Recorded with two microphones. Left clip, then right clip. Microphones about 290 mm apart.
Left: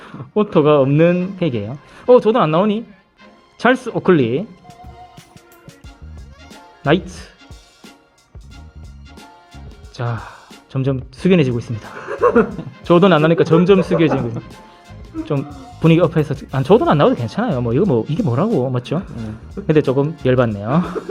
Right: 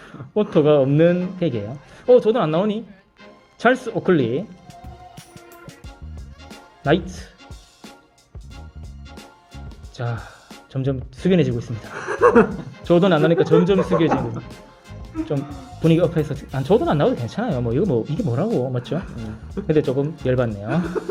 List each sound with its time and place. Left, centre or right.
0.0 s speech: centre
6.8 s speech: centre
9.9 s speech: centre
11.9 s speech: right
12.8 s speech: centre
15.4 s speech: centre
15.8 s speech: centre
18.2 s speech: centre
18.5 s speech: centre
20.8 s speech: centre